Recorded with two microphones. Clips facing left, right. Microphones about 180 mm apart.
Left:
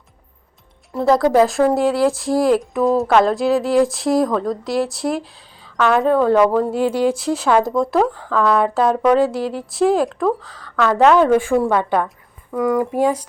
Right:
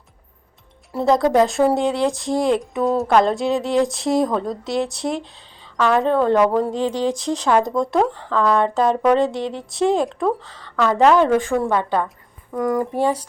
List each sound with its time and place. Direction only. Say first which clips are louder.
0.9 s speech: left 2 dB; centre (ahead or behind)